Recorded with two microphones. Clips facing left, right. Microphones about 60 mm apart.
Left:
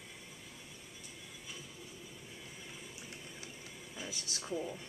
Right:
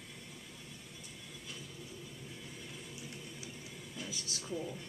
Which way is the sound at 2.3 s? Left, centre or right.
Centre.